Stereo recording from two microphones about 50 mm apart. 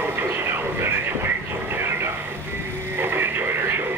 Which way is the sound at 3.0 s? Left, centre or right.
Right.